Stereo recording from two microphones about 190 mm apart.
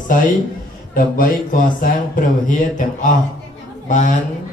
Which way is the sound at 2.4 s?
45° left (ahead or behind).